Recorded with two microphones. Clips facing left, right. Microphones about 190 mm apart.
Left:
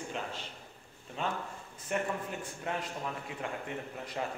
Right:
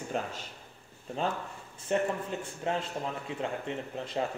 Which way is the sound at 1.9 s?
30° right (ahead or behind).